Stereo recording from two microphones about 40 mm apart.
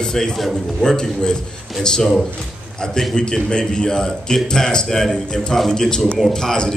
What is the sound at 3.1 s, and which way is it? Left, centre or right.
A man's voice, left.